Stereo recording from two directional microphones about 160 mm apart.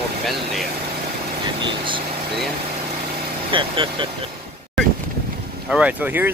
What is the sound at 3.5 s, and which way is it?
Speech, 30° right (ahead or behind).